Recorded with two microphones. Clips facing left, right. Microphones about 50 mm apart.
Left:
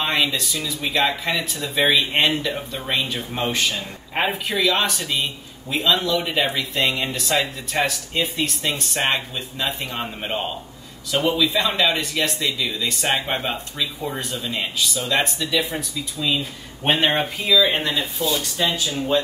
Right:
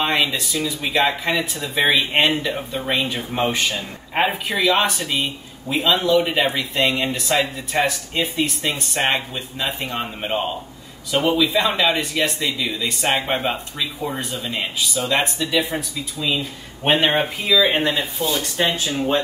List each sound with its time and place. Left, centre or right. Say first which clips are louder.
0.0 s speech: right 1 dB; centre
18.4 s speech: right 2 dB; right